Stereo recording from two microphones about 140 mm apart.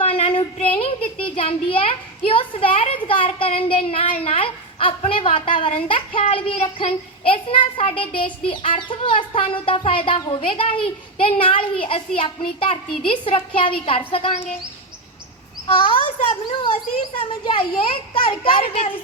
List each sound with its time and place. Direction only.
0.0 s a child's voice: 45° left (ahead or behind)
15.6 s speech: 40° left (ahead or behind)